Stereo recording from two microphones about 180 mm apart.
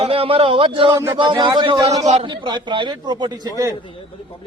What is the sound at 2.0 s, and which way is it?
Speech, 35° right (ahead or behind).